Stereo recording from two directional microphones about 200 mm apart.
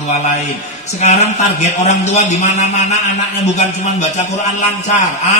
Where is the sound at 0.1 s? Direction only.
35° left (ahead or behind).